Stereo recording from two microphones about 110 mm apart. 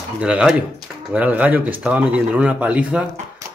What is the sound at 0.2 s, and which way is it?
Speech, 10° right (ahead or behind).